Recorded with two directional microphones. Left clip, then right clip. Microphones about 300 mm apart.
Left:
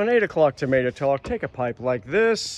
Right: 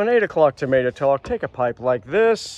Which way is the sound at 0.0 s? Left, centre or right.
Centre.